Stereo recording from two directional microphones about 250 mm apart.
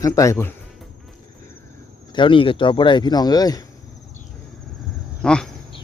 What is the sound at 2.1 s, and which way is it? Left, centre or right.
Speech, centre.